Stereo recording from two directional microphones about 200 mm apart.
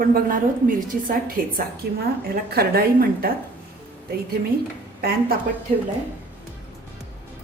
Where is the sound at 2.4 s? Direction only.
50° right (ahead or behind).